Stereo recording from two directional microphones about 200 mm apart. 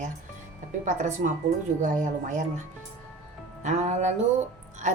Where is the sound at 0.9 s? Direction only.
40° right (ahead or behind).